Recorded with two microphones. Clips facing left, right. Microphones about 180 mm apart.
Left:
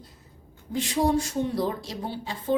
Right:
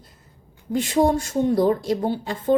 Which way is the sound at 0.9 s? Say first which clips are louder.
Right 4 dB; 50° right (ahead or behind).